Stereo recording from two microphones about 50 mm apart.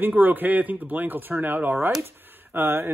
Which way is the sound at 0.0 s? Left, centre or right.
Right.